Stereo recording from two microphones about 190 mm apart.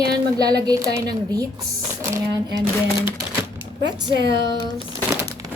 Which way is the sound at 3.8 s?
65° right (ahead or behind).